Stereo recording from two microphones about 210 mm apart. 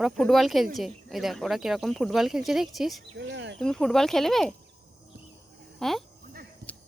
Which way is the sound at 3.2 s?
60° right (ahead or behind).